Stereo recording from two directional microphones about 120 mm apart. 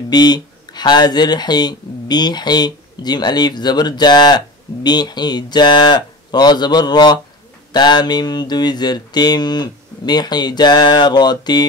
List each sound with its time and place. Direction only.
0.1 s speech: 35° left (ahead or behind)